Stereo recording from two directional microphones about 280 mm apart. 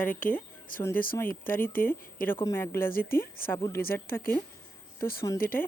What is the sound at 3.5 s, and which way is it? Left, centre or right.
Speech, centre.